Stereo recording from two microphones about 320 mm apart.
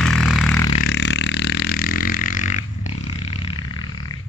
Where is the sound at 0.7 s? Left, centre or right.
Left; by 3.9 s centre.